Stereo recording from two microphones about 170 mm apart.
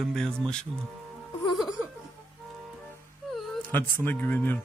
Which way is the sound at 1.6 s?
Centre (ahead or behind).